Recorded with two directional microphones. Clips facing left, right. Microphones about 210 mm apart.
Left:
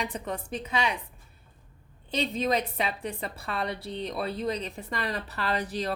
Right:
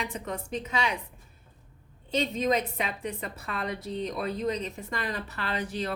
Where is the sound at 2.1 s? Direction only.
35° left (ahead or behind).